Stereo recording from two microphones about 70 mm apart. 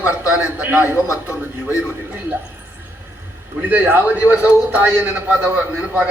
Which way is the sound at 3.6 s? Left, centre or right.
Right.